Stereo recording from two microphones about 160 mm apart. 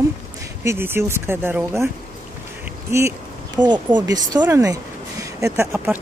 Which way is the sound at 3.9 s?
25° right (ahead or behind).